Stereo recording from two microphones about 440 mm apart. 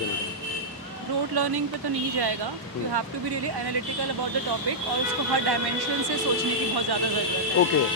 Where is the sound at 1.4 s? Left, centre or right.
Right.